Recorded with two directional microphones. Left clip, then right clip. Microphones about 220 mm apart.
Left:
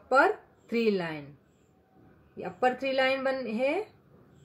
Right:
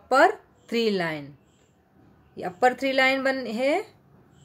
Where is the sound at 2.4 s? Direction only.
45° right (ahead or behind).